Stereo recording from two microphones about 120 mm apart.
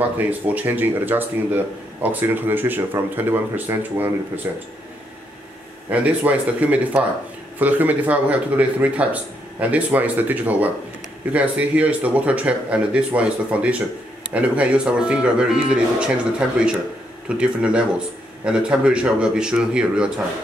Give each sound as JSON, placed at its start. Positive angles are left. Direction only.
{"t": 0.2, "sound": "speech", "side_deg": -15}
{"t": 5.9, "sound": "speech", "side_deg": -10}